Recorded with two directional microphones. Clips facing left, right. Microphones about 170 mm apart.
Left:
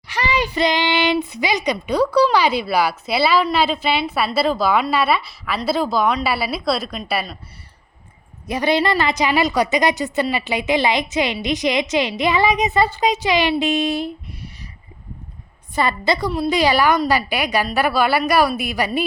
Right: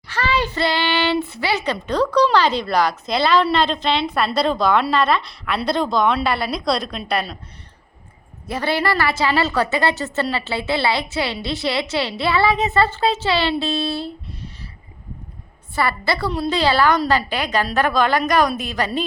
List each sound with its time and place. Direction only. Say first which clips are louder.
0.1 s a child's voice: even; 15° left (ahead or behind)
8.4 s a child's voice: left 3 dB; 15° left (ahead or behind)
15.7 s a child's voice: left 2 dB; 20° left (ahead or behind)